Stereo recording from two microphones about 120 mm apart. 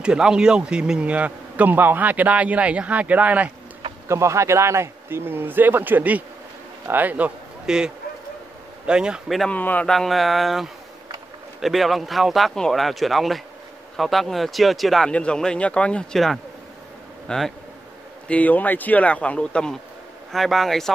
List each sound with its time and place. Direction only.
0.0 s a man's voice: 5° right (ahead or behind)
4.1 s a man's voice: 25° right (ahead or behind); by 9.5 s 5° right (ahead or behind)
9.5 s speech: 15° left (ahead or behind)
9.9 s speech: centre (ahead or behind)